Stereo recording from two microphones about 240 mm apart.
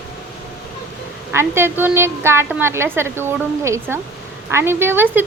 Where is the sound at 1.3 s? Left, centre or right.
Centre.